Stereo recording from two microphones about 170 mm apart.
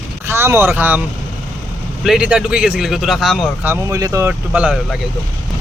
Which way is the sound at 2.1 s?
5° right (ahead or behind).